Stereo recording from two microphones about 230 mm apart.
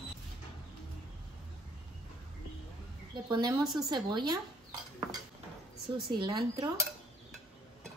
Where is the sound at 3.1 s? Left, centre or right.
Centre.